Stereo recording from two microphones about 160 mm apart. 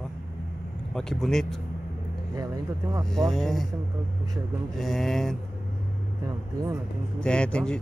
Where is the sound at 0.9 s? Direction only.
Centre (ahead or behind).